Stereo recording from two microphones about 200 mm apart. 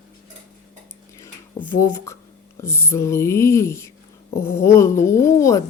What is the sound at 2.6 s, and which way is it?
A woman's voice, 15° left (ahead or behind).